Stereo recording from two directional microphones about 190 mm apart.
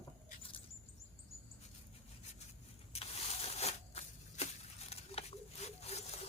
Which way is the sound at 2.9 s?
35° left (ahead or behind).